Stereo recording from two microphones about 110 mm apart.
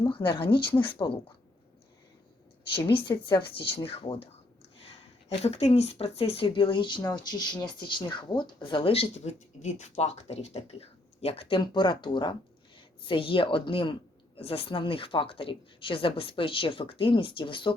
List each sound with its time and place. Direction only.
0.1 s speech: 50° left (ahead or behind)
2.7 s speech: 50° left (ahead or behind)